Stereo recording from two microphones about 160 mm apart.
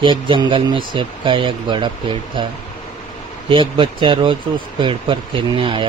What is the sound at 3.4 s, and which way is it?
Speech, 30° right (ahead or behind).